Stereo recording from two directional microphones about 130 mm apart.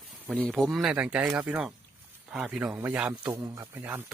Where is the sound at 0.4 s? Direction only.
Centre (ahead or behind).